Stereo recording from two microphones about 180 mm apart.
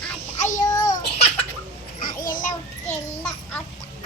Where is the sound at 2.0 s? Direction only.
50° left (ahead or behind).